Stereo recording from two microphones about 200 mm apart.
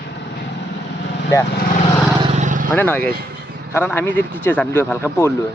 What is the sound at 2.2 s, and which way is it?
Vehicle, 35° right (ahead or behind).